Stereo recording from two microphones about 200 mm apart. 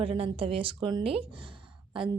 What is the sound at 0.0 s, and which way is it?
A woman's voice, 30° right (ahead or behind).